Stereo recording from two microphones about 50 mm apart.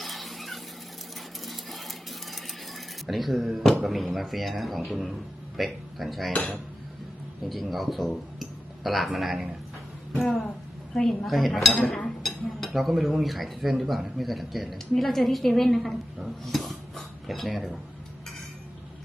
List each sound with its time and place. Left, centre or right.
0.0 s a sound: centre
1.5 s coin: centre
3.8 s speech: centre
7.4 s speech: centre
10.9 s a woman's voice: centre
11.3 s speech: centre